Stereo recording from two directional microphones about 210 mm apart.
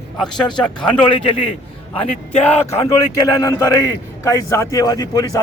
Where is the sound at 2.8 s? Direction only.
15° left (ahead or behind).